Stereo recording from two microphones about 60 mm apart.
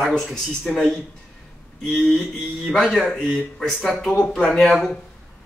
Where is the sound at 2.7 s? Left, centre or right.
Centre.